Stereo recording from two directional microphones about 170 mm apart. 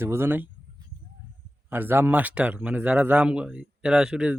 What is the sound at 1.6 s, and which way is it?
Speech, 10° right (ahead or behind).